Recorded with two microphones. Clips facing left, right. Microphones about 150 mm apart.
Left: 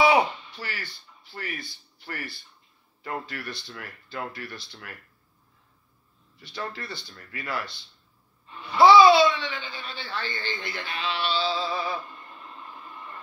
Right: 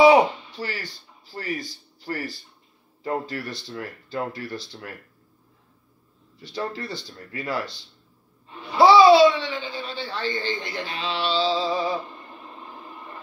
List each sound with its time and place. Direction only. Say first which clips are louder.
0.0 s speech: right 6 dB; 40° right (ahead or behind)
6.4 s speech: right 5 dB; 35° right (ahead or behind)